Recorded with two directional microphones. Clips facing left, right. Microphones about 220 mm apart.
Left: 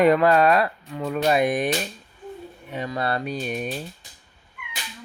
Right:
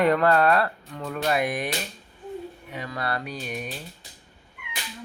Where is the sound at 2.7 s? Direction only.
25° left (ahead or behind).